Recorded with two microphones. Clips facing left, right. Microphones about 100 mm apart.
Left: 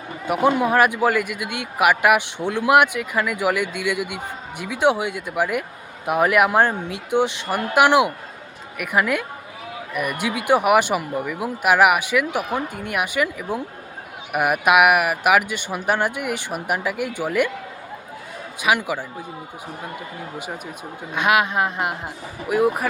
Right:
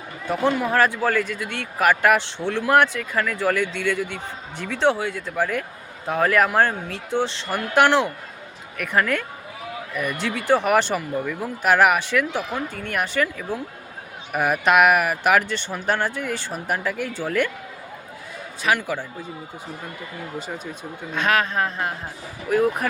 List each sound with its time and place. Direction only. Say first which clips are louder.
0.3 s a man's voice: left 3 dB; 15° left (ahead or behind)
18.6 s a man's voice: left 2 dB; 15° left (ahead or behind)
21.1 s a man's voice: left 2 dB; 15° left (ahead or behind)